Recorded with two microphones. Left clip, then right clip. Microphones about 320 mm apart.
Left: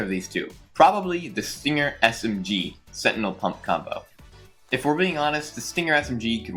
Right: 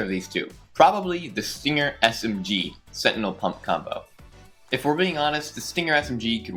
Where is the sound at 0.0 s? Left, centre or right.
Right.